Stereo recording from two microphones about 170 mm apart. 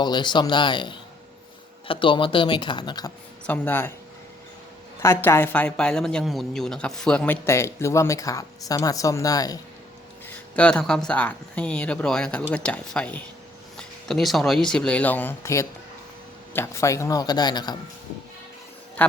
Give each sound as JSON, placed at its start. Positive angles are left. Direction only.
{"t": 0.0, "sound": "speech", "side_deg": 25}
{"t": 3.4, "sound": "speech", "side_deg": 10}
{"t": 5.0, "sound": "speech", "side_deg": 15}
{"t": 7.4, "sound": "speech", "side_deg": 15}
{"t": 10.2, "sound": "speech", "side_deg": 10}
{"t": 19.0, "sound": "speech", "side_deg": 10}